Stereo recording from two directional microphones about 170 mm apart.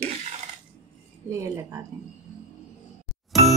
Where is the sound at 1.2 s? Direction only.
15° right (ahead or behind).